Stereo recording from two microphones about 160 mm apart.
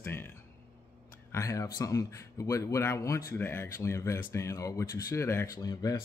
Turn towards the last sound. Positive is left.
turn(degrees=25)  # may be behind; listen again after turning